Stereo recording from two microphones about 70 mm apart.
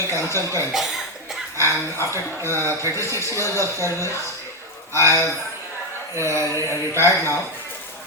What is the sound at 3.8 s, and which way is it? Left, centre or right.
Speech, left.